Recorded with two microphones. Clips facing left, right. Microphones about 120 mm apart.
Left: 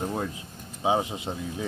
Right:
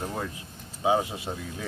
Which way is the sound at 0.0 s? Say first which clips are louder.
Left 3 dB; 10° left (ahead or behind).